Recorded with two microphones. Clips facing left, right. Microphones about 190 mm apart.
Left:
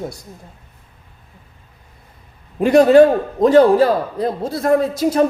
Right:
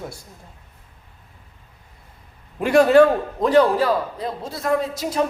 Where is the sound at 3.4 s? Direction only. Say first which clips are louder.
Left 6 dB; 45° left (ahead or behind).